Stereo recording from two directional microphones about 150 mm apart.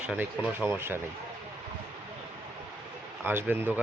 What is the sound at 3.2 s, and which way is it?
Speech, 15° right (ahead or behind).